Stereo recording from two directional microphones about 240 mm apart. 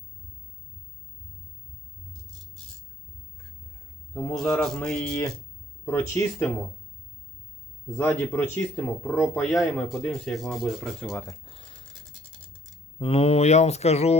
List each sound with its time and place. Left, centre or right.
4.1 s a man's voice: centre
7.9 s speech: centre
11.4 s scratch: left
13.0 s speech: left